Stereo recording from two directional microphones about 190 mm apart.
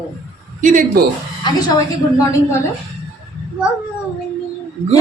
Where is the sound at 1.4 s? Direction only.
20° left (ahead or behind).